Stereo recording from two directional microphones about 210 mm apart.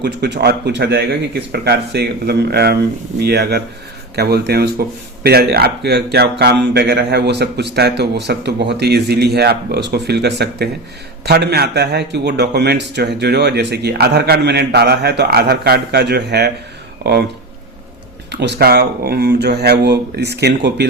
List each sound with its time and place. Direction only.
0.0 s speech: 50° right (ahead or behind)
18.3 s speech: 55° right (ahead or behind)